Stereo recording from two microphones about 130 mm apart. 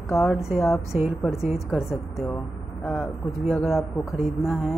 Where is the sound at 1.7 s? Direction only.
20° left (ahead or behind).